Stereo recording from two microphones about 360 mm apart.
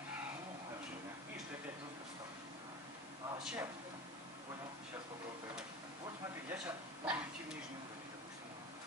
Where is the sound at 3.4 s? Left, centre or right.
Centre.